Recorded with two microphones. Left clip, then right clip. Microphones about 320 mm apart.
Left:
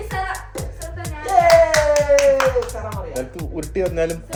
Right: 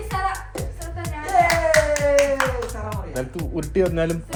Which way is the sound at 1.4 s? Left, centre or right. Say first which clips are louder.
Left 5 dB; centre.